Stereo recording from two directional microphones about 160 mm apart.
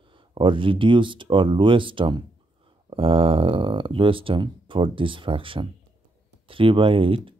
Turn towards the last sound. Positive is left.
turn(degrees=-35)  # may be behind; listen again after turning